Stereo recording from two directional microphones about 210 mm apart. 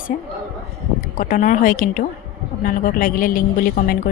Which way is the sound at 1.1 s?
40° left (ahead or behind).